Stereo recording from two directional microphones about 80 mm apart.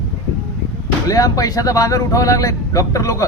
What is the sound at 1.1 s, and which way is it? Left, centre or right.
Speech, left.